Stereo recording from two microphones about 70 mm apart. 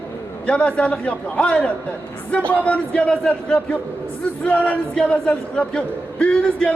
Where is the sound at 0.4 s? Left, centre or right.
Centre.